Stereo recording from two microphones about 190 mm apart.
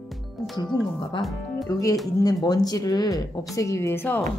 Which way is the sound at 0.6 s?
20° left (ahead or behind).